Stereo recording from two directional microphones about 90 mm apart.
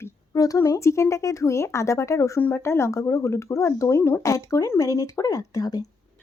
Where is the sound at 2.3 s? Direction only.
25° left (ahead or behind); by 5.8 s 45° left (ahead or behind).